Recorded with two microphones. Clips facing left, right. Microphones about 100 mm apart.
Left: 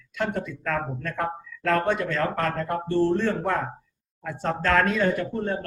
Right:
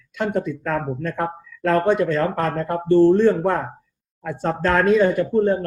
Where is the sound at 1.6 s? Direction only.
15° right (ahead or behind).